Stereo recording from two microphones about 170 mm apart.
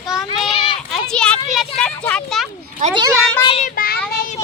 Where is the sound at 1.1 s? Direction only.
5° left (ahead or behind).